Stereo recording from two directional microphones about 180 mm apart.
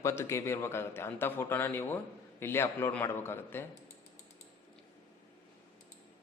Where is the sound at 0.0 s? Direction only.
15° left (ahead or behind).